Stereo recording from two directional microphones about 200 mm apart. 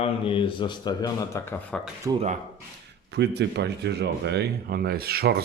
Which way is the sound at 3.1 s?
55° right (ahead or behind).